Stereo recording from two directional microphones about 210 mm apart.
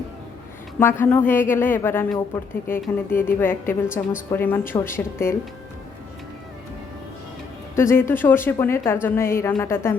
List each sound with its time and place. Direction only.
0.8 s a woman's voice: 10° left (ahead or behind)
7.8 s a woman's voice: 10° left (ahead or behind)